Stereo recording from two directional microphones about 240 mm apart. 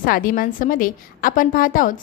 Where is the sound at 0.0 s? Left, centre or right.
Left.